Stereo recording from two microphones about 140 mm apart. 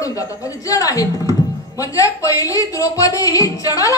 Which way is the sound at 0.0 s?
25° left (ahead or behind).